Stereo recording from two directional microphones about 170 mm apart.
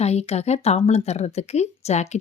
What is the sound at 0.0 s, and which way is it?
Speech, 40° left (ahead or behind).